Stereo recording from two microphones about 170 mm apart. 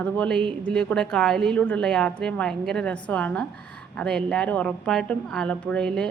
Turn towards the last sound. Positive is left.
turn(degrees=5)  # may be behind; listen again after turning